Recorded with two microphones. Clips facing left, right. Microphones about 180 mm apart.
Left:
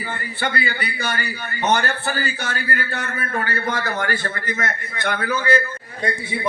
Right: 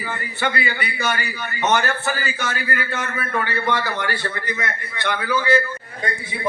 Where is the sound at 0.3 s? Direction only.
35° left (ahead or behind).